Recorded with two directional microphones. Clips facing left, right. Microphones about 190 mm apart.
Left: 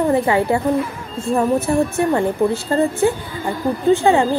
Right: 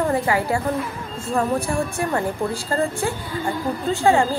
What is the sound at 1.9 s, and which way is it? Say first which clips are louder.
A woman's voice: left 6 dB; 25° left (ahead or behind).